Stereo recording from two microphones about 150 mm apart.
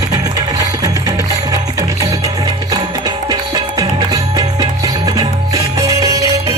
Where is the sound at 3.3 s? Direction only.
25° right (ahead or behind).